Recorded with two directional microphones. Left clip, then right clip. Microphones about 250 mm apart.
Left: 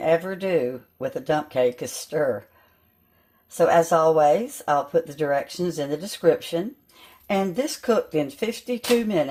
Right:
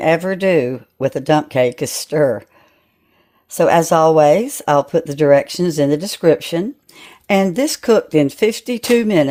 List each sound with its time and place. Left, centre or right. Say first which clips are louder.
0.0 s speech: right 7 dB; right
3.6 s speech: right 6 dB; right